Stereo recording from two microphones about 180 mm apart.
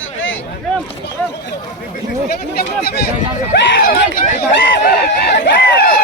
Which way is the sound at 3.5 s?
80° left.